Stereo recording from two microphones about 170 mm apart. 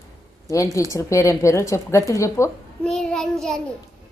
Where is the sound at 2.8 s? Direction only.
5° left (ahead or behind).